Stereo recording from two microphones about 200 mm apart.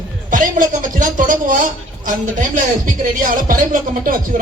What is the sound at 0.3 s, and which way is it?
A man's voice, 40° right (ahead or behind).